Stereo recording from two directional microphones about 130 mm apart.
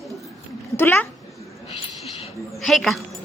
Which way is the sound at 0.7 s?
15° left (ahead or behind).